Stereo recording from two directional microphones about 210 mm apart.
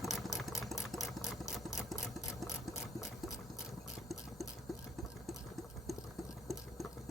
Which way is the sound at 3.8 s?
Centre (ahead or behind).